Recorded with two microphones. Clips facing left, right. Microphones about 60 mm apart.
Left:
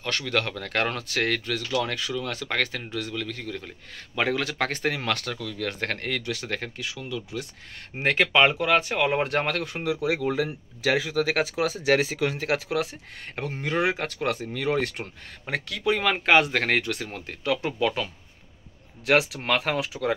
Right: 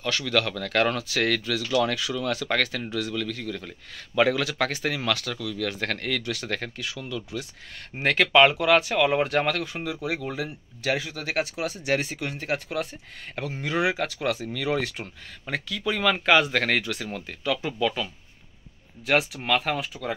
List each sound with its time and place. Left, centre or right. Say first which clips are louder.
0.2 s speech: right 2 dB; left
1.7 s speech: right 4 dB; centre
4.5 s speech: even; left
9.2 s speech: right 1 dB; left
10.0 s speech: left 6 dB; left
10.8 s speech: left 4 dB; left
13.4 s speech: even; left
14.4 s speech: left 1 dB; left
15.7 s speech: left 4 dB; left
16.0 s speech: right 1 dB; left
16.8 s speech: even; left
19.0 s speech: left 1 dB; left